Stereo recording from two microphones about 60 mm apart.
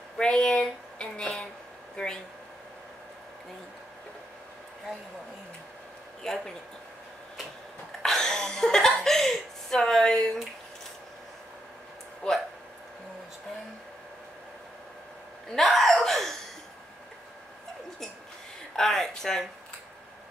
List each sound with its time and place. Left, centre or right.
0.2 s speech: centre
6.2 s speech: centre
8.0 s chuckle: centre
12.2 s speech: centre
15.5 s gasp: centre
18.8 s speech: centre